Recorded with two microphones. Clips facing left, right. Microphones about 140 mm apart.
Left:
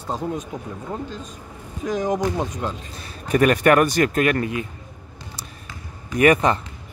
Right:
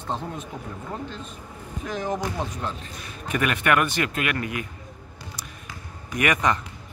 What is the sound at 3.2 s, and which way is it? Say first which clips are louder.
Speech: left 8 dB; 40° left (ahead or behind).